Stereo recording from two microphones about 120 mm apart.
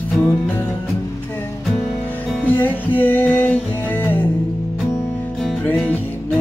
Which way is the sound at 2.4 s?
15° left (ahead or behind).